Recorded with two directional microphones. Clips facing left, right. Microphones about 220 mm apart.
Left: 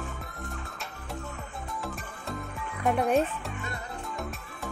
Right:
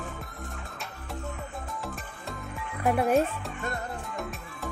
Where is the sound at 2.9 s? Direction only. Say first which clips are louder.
Right 1 dB; 5° right (ahead or behind).